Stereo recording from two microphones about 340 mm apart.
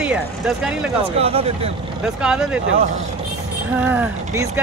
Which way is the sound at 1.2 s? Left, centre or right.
Centre.